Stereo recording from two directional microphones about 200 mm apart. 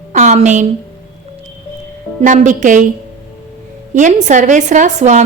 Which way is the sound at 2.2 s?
40° right (ahead or behind).